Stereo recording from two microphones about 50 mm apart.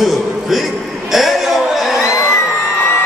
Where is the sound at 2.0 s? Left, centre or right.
Left.